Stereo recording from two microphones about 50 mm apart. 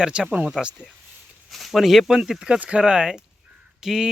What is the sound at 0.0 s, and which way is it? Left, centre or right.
Speech, centre.